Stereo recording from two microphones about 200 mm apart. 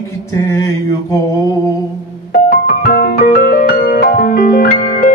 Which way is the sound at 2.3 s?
50° left (ahead or behind).